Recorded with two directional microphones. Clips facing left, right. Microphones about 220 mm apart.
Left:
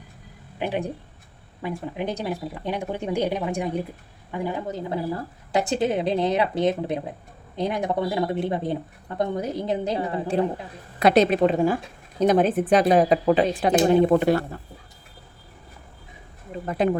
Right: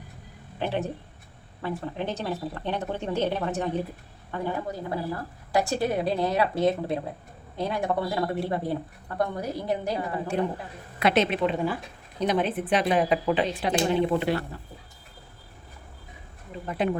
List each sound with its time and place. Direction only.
0.6 s speech: 15° left (ahead or behind)
11.0 s a woman's voice: 40° left (ahead or behind)
16.6 s a woman's voice: 45° left (ahead or behind)